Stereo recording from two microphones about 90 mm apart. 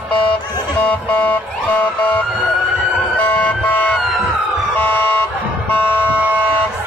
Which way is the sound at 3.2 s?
15° left (ahead or behind).